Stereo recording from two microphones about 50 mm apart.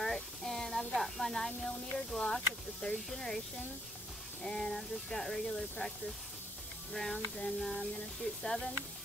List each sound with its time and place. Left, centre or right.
0.0 s speech: centre